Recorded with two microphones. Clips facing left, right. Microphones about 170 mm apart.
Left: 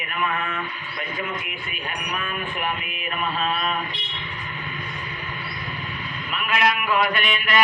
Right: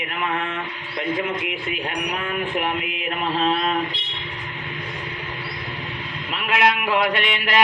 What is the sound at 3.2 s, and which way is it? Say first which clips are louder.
Mantra: right 4 dB; 25° right (ahead or behind).